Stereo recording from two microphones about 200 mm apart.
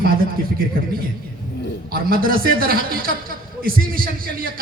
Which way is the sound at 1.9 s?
45° right (ahead or behind).